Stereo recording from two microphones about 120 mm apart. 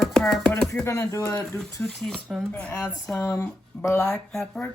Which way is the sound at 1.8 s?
5° left (ahead or behind).